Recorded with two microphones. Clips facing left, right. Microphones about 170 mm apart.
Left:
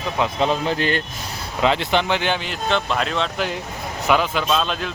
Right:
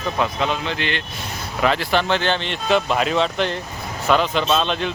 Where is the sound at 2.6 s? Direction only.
5° right (ahead or behind).